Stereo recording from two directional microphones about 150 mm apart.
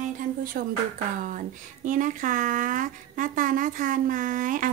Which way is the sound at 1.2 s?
60° right (ahead or behind).